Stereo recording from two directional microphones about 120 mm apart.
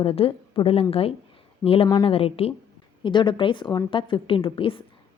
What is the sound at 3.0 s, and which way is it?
A woman's voice, 40° left (ahead or behind).